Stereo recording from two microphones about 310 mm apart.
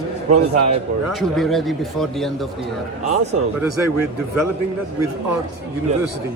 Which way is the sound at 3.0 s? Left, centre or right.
Right.